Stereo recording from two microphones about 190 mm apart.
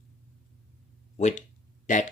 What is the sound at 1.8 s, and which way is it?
Speech, 40° left (ahead or behind).